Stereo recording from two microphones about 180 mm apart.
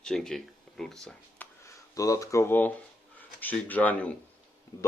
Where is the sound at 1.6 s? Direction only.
15° left (ahead or behind).